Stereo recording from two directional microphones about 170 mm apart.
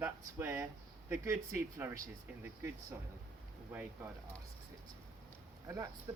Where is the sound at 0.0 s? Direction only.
15° right (ahead or behind).